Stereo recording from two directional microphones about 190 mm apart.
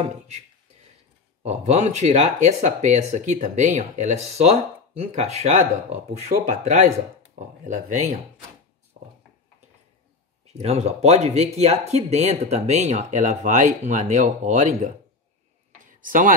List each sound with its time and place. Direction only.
1.4 s speech: 35° right (ahead or behind)
9.0 s a sound: 30° right (ahead or behind)
10.4 s speech: 35° right (ahead or behind)
15.8 s tick-tock: 45° right (ahead or behind)